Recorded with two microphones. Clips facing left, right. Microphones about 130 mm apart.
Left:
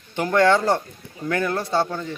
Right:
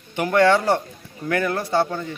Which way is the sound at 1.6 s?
20° left (ahead or behind).